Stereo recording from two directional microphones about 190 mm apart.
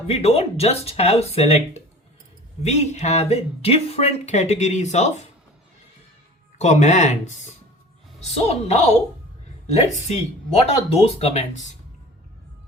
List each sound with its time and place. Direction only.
0.1 s speech: 35° left (ahead or behind)
6.6 s speech: 40° left (ahead or behind)